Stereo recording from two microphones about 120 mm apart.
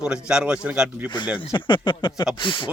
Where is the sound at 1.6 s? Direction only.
40° left (ahead or behind).